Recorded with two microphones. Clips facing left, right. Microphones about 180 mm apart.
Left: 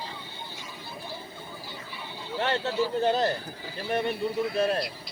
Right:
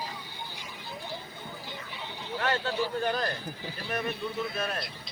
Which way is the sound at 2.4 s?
25° left (ahead or behind).